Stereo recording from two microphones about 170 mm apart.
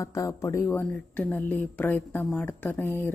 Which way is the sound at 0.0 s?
20° left (ahead or behind).